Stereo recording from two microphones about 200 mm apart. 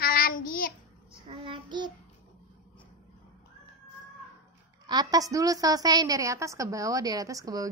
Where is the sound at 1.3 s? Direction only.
25° right (ahead or behind).